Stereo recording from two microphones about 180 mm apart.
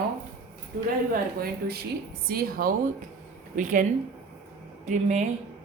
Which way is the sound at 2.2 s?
55° right (ahead or behind).